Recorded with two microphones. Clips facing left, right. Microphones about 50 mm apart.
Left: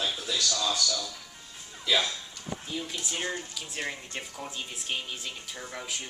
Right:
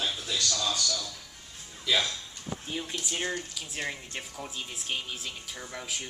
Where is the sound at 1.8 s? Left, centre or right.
Centre.